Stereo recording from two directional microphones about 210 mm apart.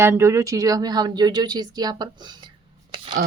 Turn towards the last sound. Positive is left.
turn(degrees=-20)  # may be behind; listen again after turning